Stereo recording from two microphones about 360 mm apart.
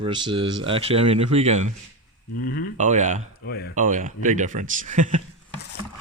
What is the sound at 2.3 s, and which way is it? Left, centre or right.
Speech, left.